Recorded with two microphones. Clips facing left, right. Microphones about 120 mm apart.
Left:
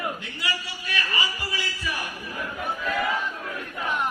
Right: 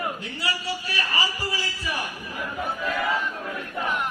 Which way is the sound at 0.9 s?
35° right (ahead or behind).